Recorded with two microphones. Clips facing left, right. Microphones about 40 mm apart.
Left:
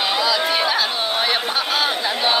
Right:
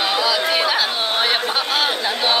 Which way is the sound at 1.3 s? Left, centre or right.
Centre.